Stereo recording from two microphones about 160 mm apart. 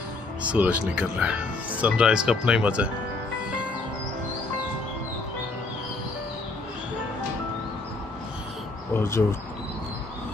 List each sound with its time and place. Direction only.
0.4 s speech: 10° right (ahead or behind)
8.9 s speech: 15° left (ahead or behind)